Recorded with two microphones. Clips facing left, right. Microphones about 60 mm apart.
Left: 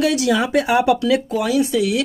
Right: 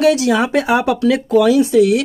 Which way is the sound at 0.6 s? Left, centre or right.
Right.